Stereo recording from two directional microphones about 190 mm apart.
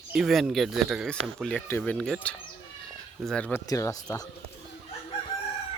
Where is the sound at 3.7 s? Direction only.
15° left (ahead or behind).